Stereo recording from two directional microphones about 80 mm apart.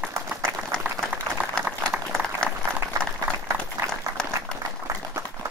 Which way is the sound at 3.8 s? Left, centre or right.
Right.